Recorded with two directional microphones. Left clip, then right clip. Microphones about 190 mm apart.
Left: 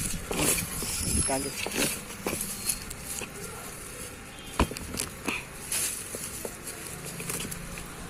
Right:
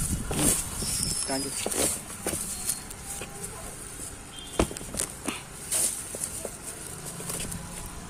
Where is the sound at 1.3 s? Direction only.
Centre (ahead or behind).